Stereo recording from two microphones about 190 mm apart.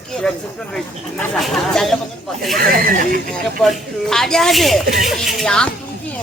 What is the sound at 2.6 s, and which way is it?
Speech, 50° right (ahead or behind).